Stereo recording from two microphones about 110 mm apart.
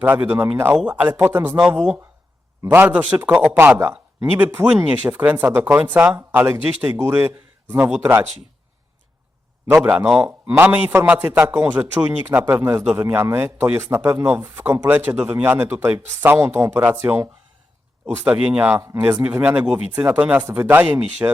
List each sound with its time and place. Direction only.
0.0 s speech: 15° right (ahead or behind)
2.6 s speech: 15° right (ahead or behind)
3.3 s speech: 5° left (ahead or behind)
4.2 s a man's voice: 20° right (ahead or behind)
9.6 s a man's voice: 25° right (ahead or behind)
18.8 s speech: 25° right (ahead or behind)